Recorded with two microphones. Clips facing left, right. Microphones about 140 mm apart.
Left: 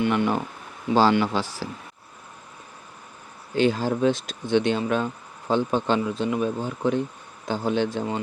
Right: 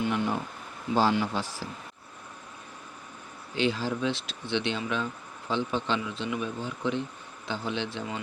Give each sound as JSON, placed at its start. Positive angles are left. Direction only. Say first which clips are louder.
{"t": 0.0, "sound": "speech", "louder": "left 6 dB", "side_deg": 75}
{"t": 3.5, "sound": "speech", "louder": "left 6 dB", "side_deg": 45}